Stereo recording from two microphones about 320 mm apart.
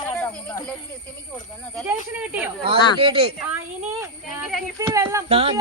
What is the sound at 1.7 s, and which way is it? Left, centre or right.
Speech, centre.